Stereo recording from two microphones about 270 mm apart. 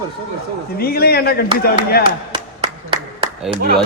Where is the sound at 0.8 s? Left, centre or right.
Left.